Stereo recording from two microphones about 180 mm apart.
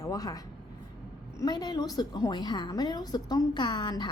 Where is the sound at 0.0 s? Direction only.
20° left (ahead or behind).